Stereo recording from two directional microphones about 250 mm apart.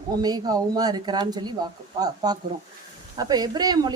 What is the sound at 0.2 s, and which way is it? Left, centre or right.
A woman's voice, centre.